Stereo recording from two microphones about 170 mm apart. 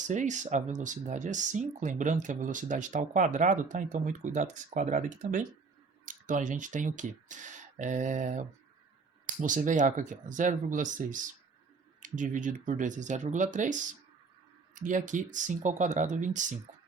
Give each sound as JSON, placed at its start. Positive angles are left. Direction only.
{"t": 0.1, "sound": "speech", "side_deg": -45}
{"t": 14.8, "sound": "speech", "side_deg": -50}